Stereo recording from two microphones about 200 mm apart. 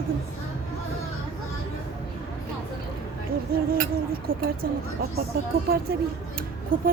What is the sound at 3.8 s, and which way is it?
Speech, 45° right (ahead or behind).